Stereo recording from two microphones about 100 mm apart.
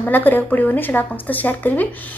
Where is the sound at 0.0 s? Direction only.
20° left (ahead or behind).